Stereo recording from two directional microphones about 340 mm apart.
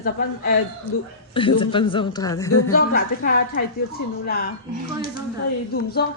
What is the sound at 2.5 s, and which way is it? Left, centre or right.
Speech, left.